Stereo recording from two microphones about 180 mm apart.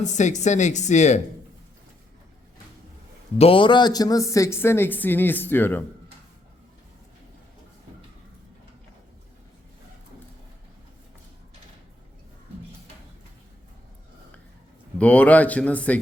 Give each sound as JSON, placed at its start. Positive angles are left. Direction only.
{"t": 0.0, "sound": "speech", "side_deg": 40}
{"t": 3.3, "sound": "a woman's voice", "side_deg": 30}
{"t": 14.9, "sound": "a woman's voice", "side_deg": 10}